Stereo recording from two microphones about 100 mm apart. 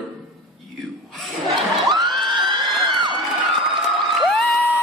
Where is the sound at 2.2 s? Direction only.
50° right (ahead or behind).